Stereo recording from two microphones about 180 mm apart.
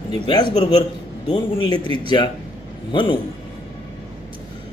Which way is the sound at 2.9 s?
25° left (ahead or behind).